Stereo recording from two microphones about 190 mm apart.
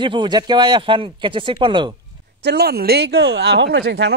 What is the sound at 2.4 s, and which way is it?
Speech, 60° right (ahead or behind).